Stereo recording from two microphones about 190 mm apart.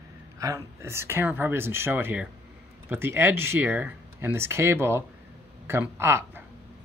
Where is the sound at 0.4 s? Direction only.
15° right (ahead or behind).